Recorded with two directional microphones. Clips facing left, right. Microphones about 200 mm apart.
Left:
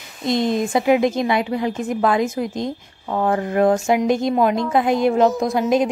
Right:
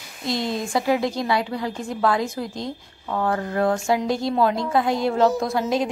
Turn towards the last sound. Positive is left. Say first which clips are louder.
# left 4 dB
turn(degrees=20)  # may be behind; listen again after turning